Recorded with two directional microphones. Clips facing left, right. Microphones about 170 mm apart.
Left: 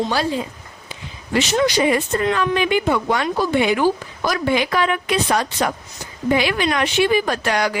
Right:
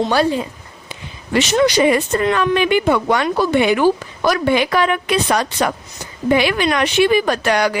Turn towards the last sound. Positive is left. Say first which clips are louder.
# right 4 dB
turn(degrees=-65)  # may be behind; listen again after turning